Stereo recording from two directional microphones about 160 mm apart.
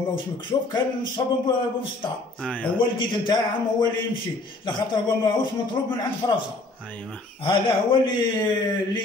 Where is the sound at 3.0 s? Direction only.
30° left (ahead or behind).